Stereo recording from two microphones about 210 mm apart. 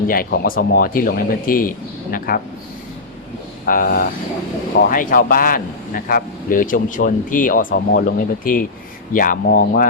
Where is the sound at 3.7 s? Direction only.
40° left (ahead or behind).